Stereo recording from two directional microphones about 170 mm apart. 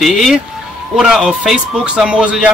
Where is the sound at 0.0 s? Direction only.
Centre (ahead or behind).